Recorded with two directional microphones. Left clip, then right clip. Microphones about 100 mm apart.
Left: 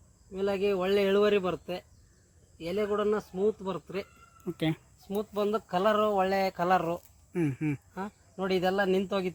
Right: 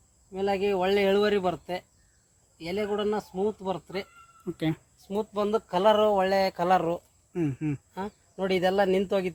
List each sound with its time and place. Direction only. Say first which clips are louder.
0.3 s speech: right 2 dB; 45° right (ahead or behind)
4.4 s speech: right 1 dB; 10° right (ahead or behind)
5.0 s speech: right 2 dB; 60° right (ahead or behind)
7.3 s speech: right 1 dB; 5° left (ahead or behind)
7.9 s speech: right 3 dB; 50° right (ahead or behind)